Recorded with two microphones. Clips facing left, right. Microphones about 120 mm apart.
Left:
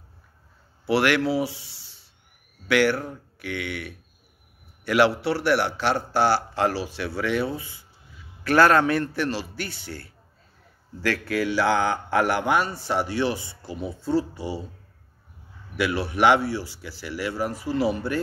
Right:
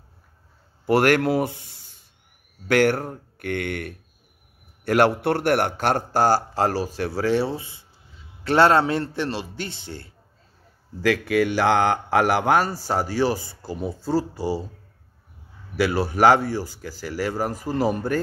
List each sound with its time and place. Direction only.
0.8 s a man's voice: 45° right (ahead or behind); by 10.1 s 25° right (ahead or behind)
11.1 s speech: 65° right (ahead or behind); by 12.4 s 90° right
12.4 s a man's voice: 40° right (ahead or behind)
15.7 s speech: 40° right (ahead or behind)